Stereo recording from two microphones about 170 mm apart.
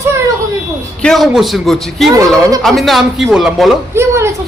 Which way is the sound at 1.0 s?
5° left (ahead or behind).